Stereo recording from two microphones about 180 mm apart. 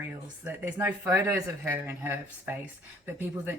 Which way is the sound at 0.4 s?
10° right (ahead or behind).